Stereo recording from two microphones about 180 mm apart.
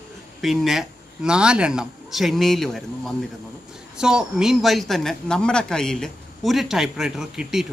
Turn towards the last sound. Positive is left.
turn(degrees=-5)  # may be behind; listen again after turning